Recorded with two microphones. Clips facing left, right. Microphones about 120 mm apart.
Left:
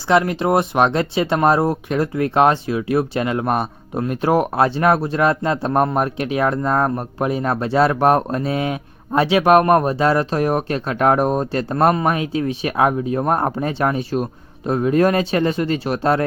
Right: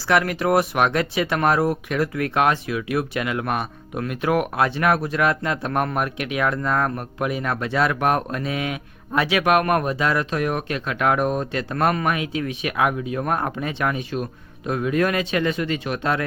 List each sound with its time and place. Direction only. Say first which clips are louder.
0.1 s speech: left 3 dB; 25° left (ahead or behind)